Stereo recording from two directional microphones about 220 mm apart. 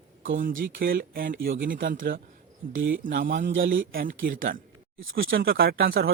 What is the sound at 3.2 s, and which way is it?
Speech, 35° right (ahead or behind).